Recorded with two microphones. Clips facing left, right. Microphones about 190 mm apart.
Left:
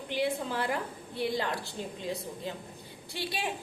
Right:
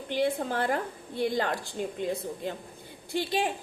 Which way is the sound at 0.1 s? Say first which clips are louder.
Right 3 dB; 50° right (ahead or behind).